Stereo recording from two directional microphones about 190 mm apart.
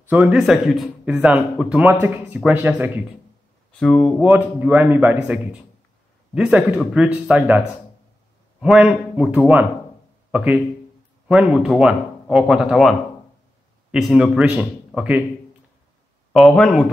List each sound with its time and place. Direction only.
0.1 s speech: 5° right (ahead or behind)
3.8 s speech: 5° left (ahead or behind)
4.3 s speech: 10° right (ahead or behind)
13.9 s speech: 5° right (ahead or behind)
16.3 s speech: 5° left (ahead or behind)